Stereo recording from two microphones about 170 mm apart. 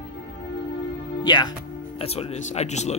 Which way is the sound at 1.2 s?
25° left (ahead or behind).